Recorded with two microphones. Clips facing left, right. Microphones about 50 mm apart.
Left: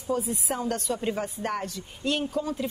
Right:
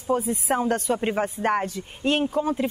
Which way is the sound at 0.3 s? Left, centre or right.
Right.